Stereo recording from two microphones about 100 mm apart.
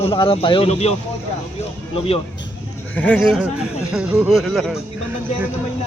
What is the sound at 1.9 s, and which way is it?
Speech, 70° left (ahead or behind).